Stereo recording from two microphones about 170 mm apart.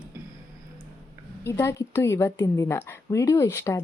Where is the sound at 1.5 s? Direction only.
15° left (ahead or behind).